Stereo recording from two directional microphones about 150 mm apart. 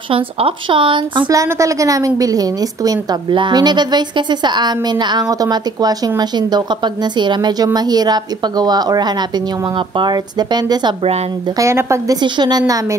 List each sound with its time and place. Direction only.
0.1 s speech: 35° right (ahead or behind)
1.3 s a woman's voice: 20° right (ahead or behind)